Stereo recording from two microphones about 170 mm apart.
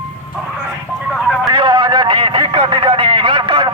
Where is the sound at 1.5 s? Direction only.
30° right (ahead or behind).